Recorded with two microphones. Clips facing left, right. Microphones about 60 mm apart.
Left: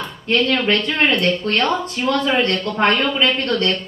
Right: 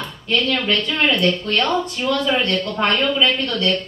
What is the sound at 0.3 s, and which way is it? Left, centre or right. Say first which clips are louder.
Speech: left 2 dB; left.